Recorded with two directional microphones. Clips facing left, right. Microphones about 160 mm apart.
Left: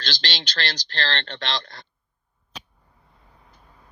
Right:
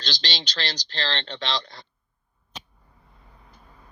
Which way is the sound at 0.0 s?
65° left (ahead or behind).